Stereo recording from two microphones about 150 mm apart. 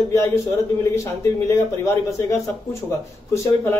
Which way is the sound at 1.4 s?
20° left (ahead or behind).